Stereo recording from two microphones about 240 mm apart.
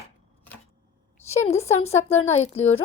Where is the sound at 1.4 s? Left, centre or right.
Left.